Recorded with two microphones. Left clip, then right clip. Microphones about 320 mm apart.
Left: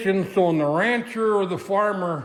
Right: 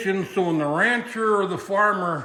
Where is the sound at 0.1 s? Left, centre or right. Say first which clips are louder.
Left 4 dB; left.